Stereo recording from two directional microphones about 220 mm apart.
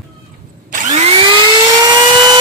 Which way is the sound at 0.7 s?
30° right (ahead or behind).